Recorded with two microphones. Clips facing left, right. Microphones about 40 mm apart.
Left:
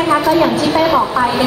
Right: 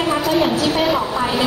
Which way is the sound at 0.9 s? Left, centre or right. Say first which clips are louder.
Left 6 dB; left.